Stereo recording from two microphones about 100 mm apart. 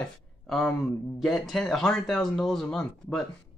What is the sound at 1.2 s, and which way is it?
Speech, centre (ahead or behind).